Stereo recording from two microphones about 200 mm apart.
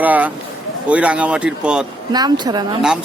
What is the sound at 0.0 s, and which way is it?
Speech, 10° right (ahead or behind).